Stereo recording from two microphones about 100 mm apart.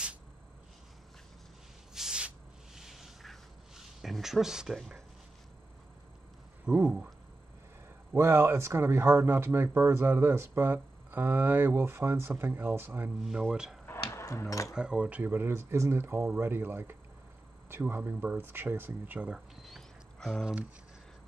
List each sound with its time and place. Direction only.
2.0 s a sound: 10° right (ahead or behind)
6.6 s speech: 10° right (ahead or behind)
8.1 s speech: 25° right (ahead or behind)
13.4 s speech: 5° right (ahead or behind)
13.8 s music: 30° left (ahead or behind)
14.7 s speech: 10° right (ahead or behind)
19.6 s a sound: centre (ahead or behind)